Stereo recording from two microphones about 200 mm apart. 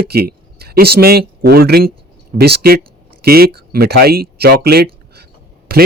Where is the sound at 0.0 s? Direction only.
50° right (ahead or behind).